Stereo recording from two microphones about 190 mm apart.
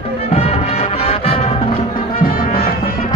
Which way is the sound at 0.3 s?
30° left (ahead or behind).